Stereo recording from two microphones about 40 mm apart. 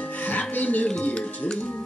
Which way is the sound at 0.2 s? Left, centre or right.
Left.